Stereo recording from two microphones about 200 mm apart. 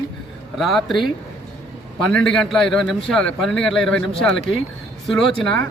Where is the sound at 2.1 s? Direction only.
5° left (ahead or behind).